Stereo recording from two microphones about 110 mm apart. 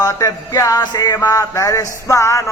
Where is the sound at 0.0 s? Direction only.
30° left (ahead or behind).